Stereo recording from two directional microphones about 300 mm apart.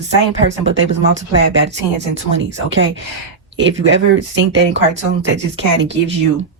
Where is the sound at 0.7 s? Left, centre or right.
Right.